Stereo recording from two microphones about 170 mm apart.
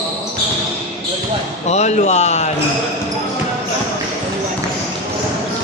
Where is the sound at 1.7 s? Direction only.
40° left (ahead or behind).